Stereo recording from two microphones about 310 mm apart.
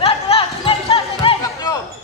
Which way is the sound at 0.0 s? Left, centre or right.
Centre.